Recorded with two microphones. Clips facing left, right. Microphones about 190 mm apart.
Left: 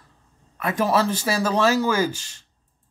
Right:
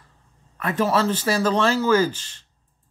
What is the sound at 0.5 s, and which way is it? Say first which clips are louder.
A man's voice: even; 10° left (ahead or behind).